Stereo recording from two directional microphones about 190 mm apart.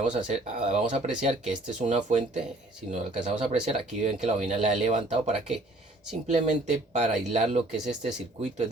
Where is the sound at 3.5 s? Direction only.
35° right (ahead or behind).